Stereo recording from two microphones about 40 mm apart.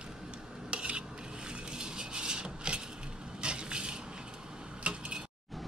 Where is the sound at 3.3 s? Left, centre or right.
Right.